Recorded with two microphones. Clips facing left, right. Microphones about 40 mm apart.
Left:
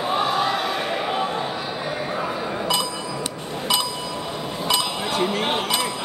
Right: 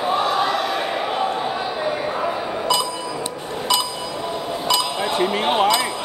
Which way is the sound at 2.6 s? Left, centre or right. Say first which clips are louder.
Right 3 dB; centre.